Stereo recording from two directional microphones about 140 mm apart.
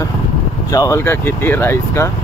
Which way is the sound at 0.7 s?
25° left (ahead or behind).